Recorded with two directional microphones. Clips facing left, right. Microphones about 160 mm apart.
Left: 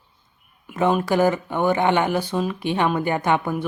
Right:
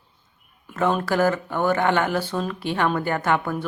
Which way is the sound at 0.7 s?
15° left (ahead or behind).